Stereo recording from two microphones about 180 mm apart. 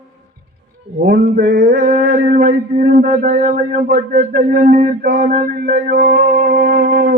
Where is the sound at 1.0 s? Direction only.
55° right (ahead or behind).